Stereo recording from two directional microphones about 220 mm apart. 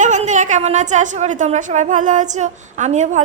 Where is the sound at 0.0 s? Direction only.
35° right (ahead or behind).